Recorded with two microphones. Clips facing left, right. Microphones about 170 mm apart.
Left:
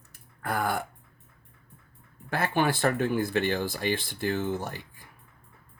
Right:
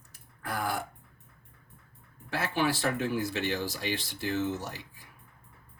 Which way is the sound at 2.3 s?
55° left (ahead or behind).